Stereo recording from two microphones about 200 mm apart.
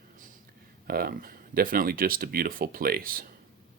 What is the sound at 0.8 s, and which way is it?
Speech, 50° right (ahead or behind).